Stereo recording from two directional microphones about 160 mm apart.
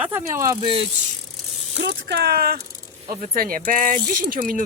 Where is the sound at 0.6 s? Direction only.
35° right (ahead or behind).